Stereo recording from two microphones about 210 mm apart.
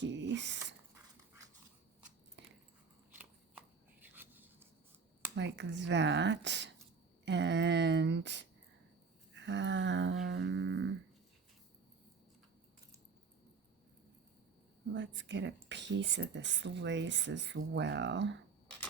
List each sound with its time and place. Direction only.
0.0 s speech: 60° right (ahead or behind)
4.0 s a sound: 10° right (ahead or behind)
5.3 s speech: 55° right (ahead or behind)
9.3 s humming: 60° right (ahead or behind)
14.9 s speech: 60° right (ahead or behind)